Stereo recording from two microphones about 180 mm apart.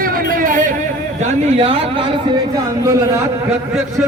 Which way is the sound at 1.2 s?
35° right (ahead or behind).